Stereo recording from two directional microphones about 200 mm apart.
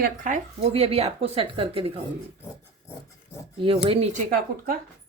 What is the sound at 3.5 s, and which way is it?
Speech, 25° right (ahead or behind).